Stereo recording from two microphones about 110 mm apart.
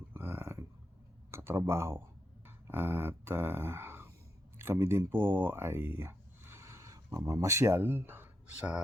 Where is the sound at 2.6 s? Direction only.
20° right (ahead or behind).